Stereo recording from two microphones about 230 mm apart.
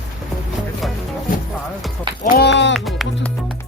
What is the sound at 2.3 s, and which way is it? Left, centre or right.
Run, left.